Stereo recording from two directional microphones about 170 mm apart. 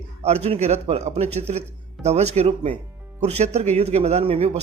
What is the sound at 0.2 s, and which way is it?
A man's voice, 40° right (ahead or behind).